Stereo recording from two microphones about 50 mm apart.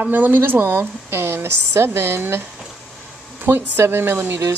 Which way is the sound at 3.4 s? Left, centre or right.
Right.